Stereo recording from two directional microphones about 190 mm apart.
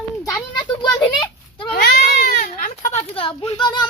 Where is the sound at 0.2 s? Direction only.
20° left (ahead or behind).